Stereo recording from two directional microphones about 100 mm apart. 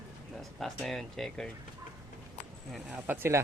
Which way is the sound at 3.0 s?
20° right (ahead or behind).